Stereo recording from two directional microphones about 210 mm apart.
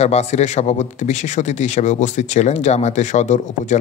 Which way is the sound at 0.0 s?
30° left (ahead or behind).